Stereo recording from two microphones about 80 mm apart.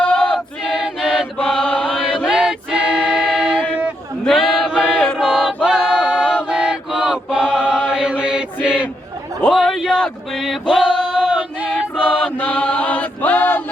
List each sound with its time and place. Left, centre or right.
0.0 s choir: centre
0.3 s choir: centre
1.4 s chant: centre
2.2 s choir: centre
4.3 s choir: centre
5.6 s a capella: centre
6.5 s chant: centre
8.6 s a sound: centre
9.5 s a sound: centre
10.7 s male singing: centre
12.0 s chant: centre